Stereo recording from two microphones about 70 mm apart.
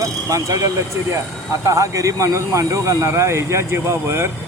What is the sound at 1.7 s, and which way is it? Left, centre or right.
Speech, right.